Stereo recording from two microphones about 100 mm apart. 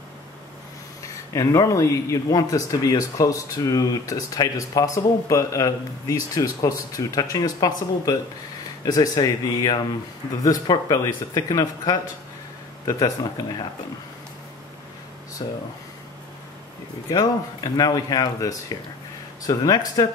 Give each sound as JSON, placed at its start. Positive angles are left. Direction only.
{"t": 1.3, "sound": "speech", "side_deg": 35}
{"t": 15.4, "sound": "speech", "side_deg": 40}
{"t": 17.1, "sound": "speech", "side_deg": 35}